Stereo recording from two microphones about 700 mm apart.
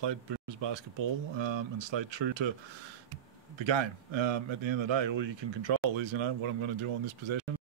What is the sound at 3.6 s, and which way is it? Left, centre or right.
Speech, right.